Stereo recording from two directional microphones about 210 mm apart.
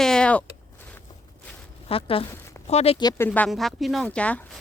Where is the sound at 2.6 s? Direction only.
30° left (ahead or behind); by 4.6 s 5° left (ahead or behind).